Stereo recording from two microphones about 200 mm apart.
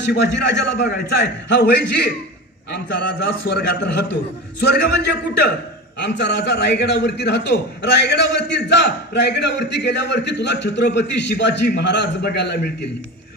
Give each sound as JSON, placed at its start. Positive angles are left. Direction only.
{"t": 0.0, "sound": "a man's voice", "side_deg": 60}